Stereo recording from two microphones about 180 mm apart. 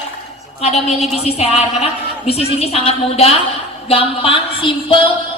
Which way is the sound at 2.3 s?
35° left (ahead or behind).